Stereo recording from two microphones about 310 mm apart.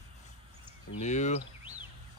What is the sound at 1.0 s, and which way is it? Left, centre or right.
Speech, left.